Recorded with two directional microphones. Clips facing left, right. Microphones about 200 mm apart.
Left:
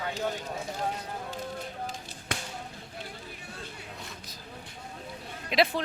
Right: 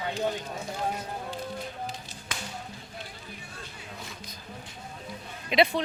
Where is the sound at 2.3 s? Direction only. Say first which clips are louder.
Left 4 dB; 60° left (ahead or behind).